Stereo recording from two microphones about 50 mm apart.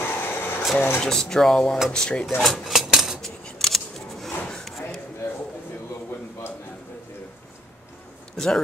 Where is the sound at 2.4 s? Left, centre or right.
Centre.